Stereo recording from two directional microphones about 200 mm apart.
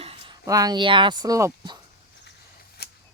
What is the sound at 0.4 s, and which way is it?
Speech, 20° right (ahead or behind).